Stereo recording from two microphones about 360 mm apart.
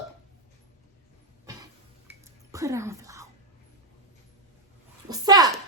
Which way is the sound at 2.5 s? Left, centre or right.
Centre.